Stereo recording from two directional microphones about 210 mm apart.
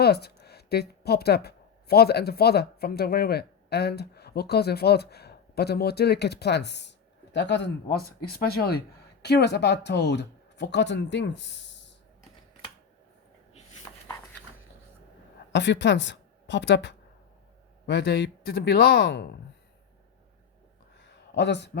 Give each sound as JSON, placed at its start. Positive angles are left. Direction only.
{"t": 0.0, "sound": "a woman's voice", "side_deg": 50}
{"t": 15.5, "sound": "a woman's voice", "side_deg": 55}
{"t": 21.0, "sound": "a sound", "side_deg": 55}